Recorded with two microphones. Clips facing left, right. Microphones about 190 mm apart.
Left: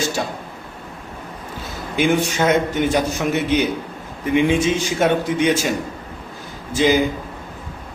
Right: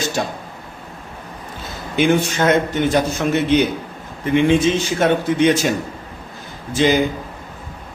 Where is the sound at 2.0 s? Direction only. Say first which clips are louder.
Right 2 dB; 5° left (ahead or behind).